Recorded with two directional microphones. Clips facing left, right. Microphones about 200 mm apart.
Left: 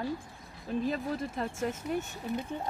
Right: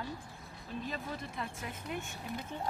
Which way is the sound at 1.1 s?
45° left (ahead or behind).